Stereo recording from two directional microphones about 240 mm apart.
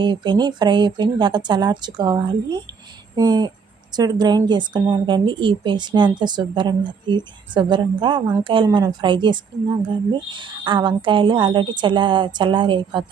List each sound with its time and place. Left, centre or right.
0.0 s a woman's voice: centre